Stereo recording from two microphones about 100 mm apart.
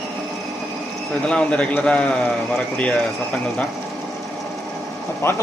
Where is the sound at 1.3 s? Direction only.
10° left (ahead or behind).